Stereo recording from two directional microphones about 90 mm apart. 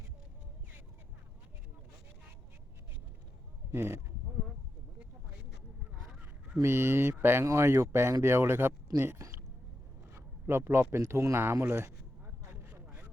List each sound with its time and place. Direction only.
3.7 s speech: 30° right (ahead or behind)
6.6 s speech: 30° right (ahead or behind)
12.6 s vehicle: 20° right (ahead or behind)